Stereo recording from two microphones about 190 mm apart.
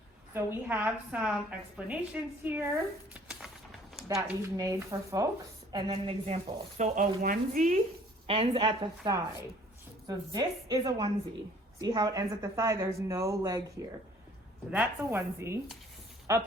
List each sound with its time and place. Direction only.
0.3 s a woman's voice: 10° right (ahead or behind)
3.1 s a sound: 5° right (ahead or behind)
4.4 s a woman's voice: 15° right (ahead or behind)
5.7 s speech: 25° right (ahead or behind); by 7.8 s 40° right (ahead or behind)
8.3 s a woman's voice: 30° right (ahead or behind)